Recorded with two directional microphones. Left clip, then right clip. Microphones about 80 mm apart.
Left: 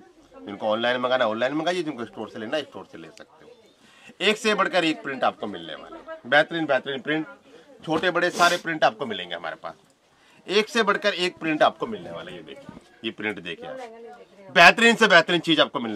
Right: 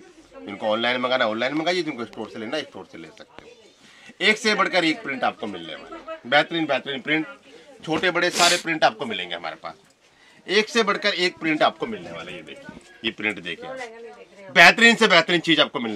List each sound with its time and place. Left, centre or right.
0.5 s a man's voice: centre
6.3 s a man's voice: left
7.8 s a man's voice: left
8.3 s a man's voice: left
8.6 s a man's voice: left; by 15.9 s centre